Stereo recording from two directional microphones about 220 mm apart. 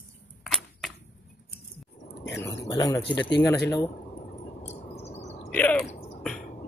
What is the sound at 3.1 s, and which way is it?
Speech, 55° left (ahead or behind).